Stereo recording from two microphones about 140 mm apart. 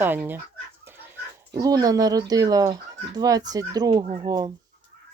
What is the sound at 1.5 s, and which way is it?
Speech, 25° right (ahead or behind).